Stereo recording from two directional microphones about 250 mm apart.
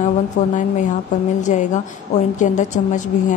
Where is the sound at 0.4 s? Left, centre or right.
Left.